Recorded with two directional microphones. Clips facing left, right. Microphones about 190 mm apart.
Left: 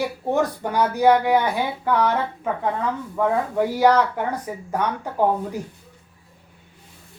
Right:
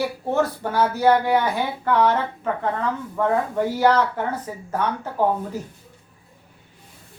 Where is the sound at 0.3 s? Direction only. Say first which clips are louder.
Even; 15° left (ahead or behind).